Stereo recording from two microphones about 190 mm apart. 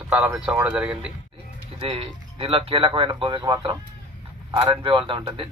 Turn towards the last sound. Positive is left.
turn(degrees=-25)  # may be behind; listen again after turning